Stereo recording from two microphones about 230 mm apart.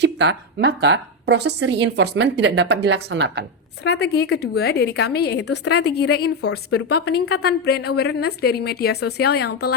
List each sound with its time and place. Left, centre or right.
0.0 s a woman's voice: right
3.8 s a woman's voice: left